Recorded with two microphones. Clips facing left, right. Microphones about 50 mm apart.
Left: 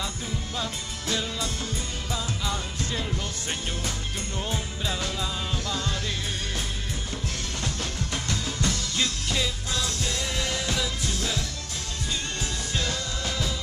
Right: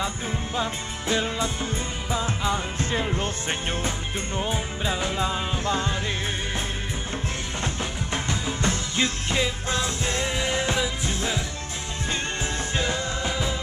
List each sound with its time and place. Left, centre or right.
0.6 s music: right
7.6 s music: right
12.7 s music: right